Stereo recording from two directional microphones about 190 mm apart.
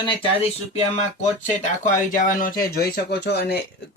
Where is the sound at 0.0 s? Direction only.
25° left (ahead or behind).